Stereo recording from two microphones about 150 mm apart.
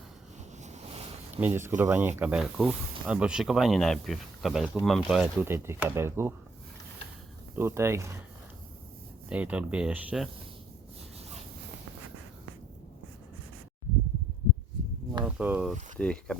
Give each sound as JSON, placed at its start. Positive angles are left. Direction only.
{"t": 0.6, "sound": "waves", "side_deg": -45}
{"t": 1.4, "sound": "speech", "side_deg": -15}
{"t": 7.5, "sound": "speech", "side_deg": -15}
{"t": 9.3, "sound": "speech", "side_deg": -10}
{"t": 15.2, "sound": "a sound", "side_deg": -10}
{"t": 16.0, "sound": "speech", "side_deg": 5}